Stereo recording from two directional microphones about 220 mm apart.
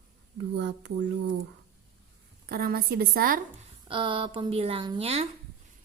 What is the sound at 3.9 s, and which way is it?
A woman's voice, 25° right (ahead or behind).